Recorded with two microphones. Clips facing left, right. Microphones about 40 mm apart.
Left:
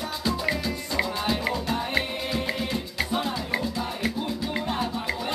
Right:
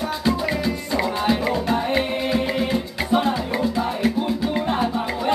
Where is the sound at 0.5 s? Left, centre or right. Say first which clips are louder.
Right 5 dB; centre.